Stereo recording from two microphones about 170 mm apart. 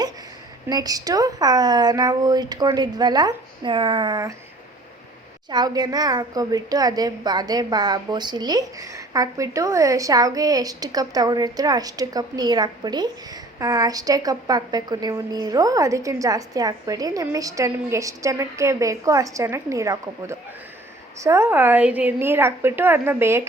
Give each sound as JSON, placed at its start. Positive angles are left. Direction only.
{"t": 0.7, "sound": "a woman's voice", "side_deg": -20}
{"t": 5.5, "sound": "a woman's voice", "side_deg": -25}